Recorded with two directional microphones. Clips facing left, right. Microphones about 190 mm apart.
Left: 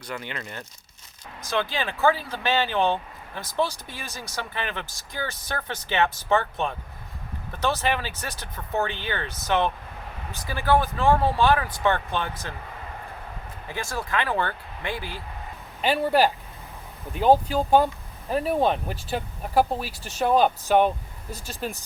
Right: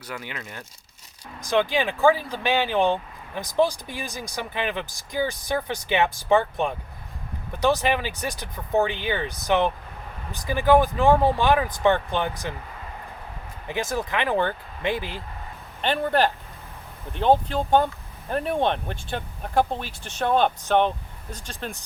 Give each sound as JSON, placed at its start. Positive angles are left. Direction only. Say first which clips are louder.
{"t": 0.1, "sound": "speech", "louder": "left 1 dB", "side_deg": -5}
{"t": 13.7, "sound": "speech", "louder": "right 4 dB", "side_deg": -20}
{"t": 15.8, "sound": "speech", "louder": "left 1 dB", "side_deg": 5}